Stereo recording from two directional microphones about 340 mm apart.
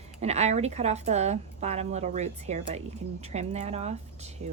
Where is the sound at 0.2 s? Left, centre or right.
Centre.